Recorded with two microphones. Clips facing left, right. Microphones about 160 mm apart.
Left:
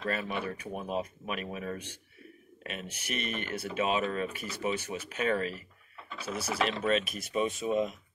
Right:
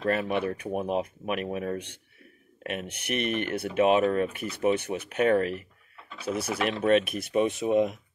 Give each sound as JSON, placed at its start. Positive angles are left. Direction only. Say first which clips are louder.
{"t": 0.0, "sound": "speech", "louder": "right 7 dB", "side_deg": -55}